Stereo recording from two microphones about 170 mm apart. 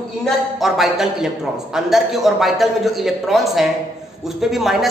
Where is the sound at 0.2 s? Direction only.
Centre (ahead or behind).